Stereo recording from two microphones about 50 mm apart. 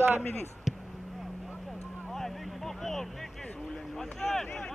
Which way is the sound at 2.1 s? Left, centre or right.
Centre.